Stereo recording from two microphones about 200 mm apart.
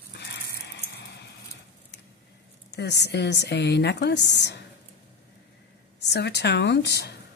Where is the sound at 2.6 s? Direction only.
60° left (ahead or behind).